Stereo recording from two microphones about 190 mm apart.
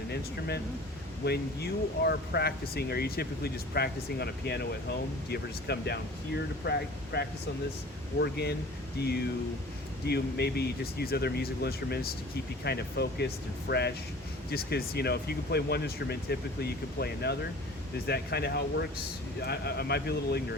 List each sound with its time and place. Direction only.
0.1 s speech: 60° left (ahead or behind)